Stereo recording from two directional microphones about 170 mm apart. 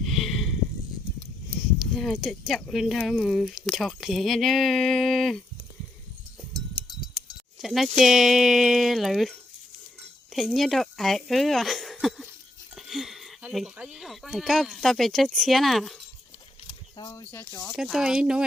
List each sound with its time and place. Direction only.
0.0 s a sound: centre (ahead or behind)
2.0 s speech: centre (ahead or behind)
7.6 s speech: centre (ahead or behind)
17.0 s speech: 25° left (ahead or behind)
17.3 s speech: 10° left (ahead or behind)
17.7 s speech: centre (ahead or behind)